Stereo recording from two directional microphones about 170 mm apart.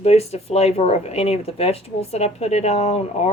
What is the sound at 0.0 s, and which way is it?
Speech, 35° left (ahead or behind).